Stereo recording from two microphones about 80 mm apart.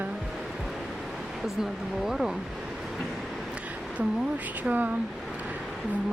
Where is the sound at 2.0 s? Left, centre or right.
Centre.